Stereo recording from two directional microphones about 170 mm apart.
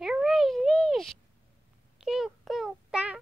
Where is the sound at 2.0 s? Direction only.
Centre (ahead or behind).